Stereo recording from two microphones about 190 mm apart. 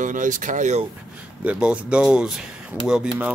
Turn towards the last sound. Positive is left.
turn(degrees=-5)  # may be behind; listen again after turning